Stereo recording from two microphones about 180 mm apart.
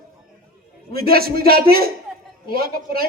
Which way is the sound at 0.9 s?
55° right (ahead or behind).